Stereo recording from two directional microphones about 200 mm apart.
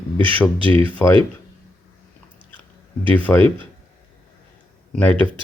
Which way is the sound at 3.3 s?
10° left (ahead or behind).